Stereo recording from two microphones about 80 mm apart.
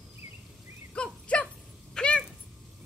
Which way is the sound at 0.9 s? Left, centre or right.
Centre.